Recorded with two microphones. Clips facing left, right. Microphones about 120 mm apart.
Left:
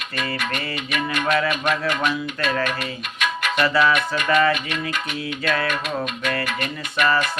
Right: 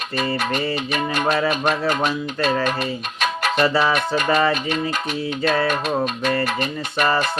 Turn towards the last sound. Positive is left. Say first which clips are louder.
# right 1 dB
turn(degrees=-30)  # may be behind; listen again after turning